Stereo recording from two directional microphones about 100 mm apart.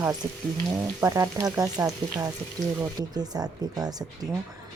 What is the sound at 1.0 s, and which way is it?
Speech, 30° right (ahead or behind).